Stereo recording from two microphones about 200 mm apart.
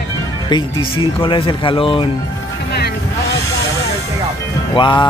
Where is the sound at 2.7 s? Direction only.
55° left (ahead or behind).